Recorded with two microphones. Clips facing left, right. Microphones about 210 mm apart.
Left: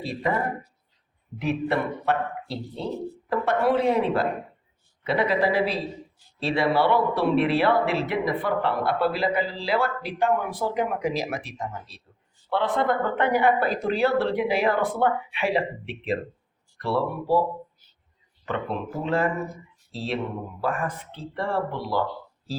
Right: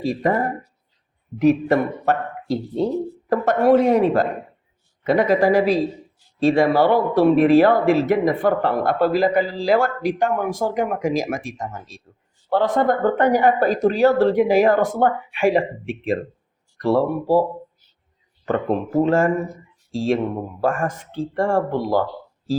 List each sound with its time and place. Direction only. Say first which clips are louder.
0.0 s speech: right 7 dB; 45° right (ahead or behind)
1.4 s speech: right 9 dB; 45° right (ahead or behind)
18.4 s speech: right 8 dB; 45° right (ahead or behind)